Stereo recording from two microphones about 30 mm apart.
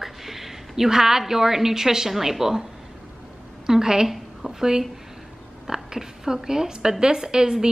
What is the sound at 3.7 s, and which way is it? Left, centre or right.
Speech, centre.